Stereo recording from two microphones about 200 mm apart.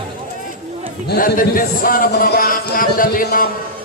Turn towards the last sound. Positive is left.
turn(degrees=45)  # may be behind; listen again after turning